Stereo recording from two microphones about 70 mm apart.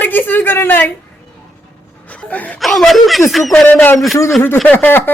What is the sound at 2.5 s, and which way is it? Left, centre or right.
Speech, centre.